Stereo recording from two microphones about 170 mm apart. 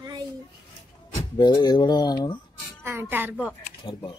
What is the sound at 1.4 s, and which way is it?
Speech, 25° left (ahead or behind).